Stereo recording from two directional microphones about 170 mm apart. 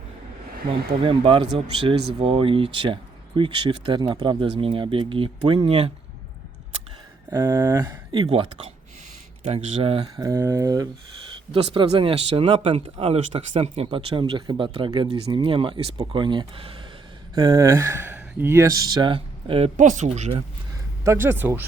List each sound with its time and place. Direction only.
0.7 s speech: 30° right (ahead or behind)
7.3 s speech: 20° right (ahead or behind)
10.2 s speech: 15° right (ahead or behind); by 20.3 s 40° right (ahead or behind)
21.0 s speech: 15° right (ahead or behind)